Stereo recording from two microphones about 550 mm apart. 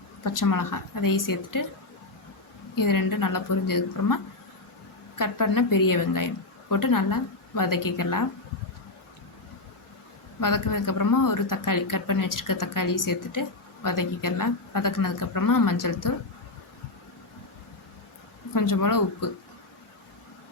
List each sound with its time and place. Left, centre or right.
0.3 s a woman's voice: left
2.7 s a woman's voice: left
10.4 s a woman's voice: left
18.5 s a woman's voice: left